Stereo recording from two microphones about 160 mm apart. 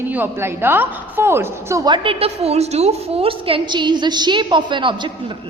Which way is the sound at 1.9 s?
35° right (ahead or behind).